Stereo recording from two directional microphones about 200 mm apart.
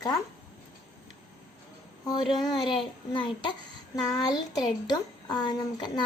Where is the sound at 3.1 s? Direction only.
25° left (ahead or behind).